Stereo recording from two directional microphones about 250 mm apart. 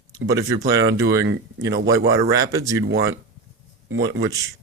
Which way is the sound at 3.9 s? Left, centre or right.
Right.